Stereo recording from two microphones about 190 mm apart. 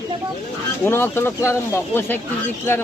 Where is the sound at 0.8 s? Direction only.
10° left (ahead or behind).